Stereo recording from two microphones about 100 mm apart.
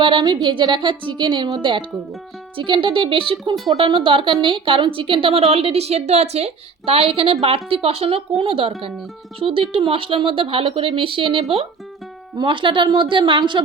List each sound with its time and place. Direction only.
0.0 s a woman's voice: 45° right (ahead or behind)
2.6 s speech: 55° right (ahead or behind); by 8.2 s 80° right
8.4 s a woman's voice: 65° right (ahead or behind)